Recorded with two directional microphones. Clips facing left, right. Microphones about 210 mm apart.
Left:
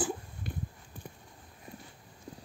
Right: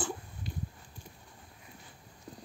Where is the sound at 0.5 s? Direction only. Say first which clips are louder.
Left 2 dB; 55° left (ahead or behind).